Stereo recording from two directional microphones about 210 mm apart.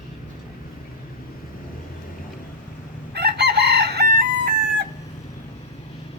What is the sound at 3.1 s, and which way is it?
Chicken, 50° right (ahead or behind).